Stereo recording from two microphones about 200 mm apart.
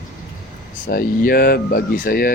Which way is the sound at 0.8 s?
45° left (ahead or behind).